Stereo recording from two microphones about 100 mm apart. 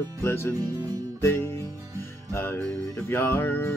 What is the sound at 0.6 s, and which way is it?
Speech, 35° right (ahead or behind).